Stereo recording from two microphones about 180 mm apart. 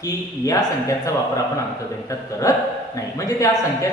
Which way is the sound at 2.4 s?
20° left (ahead or behind).